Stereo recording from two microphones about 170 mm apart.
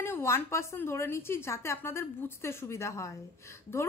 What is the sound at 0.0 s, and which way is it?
A woman's voice, 15° left (ahead or behind).